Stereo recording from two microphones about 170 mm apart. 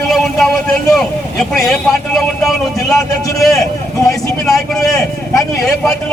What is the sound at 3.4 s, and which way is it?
A man's voice, centre (ahead or behind).